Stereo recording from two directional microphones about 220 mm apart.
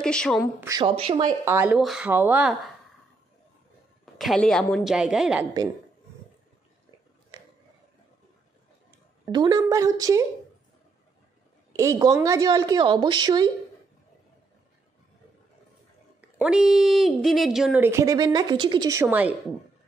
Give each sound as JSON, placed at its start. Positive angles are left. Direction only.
{"t": 0.0, "sound": "a woman's voice", "side_deg": 5}
{"t": 0.6, "sound": "speech", "side_deg": -15}
{"t": 1.4, "sound": "speech", "side_deg": -10}
{"t": 4.0, "sound": "a woman's voice", "side_deg": 0}
{"t": 9.2, "sound": "speech", "side_deg": -20}
{"t": 11.7, "sound": "speech", "side_deg": -15}
{"t": 16.2, "sound": "speech", "side_deg": -5}